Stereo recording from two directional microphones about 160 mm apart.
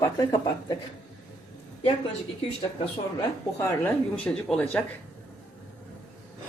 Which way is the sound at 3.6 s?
15° left (ahead or behind).